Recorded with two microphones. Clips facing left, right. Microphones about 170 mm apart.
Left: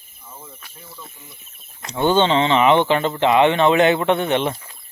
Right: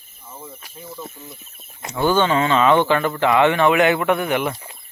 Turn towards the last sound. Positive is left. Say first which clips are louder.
# left 1 dB
turn(degrees=25)  # may be behind; listen again after turning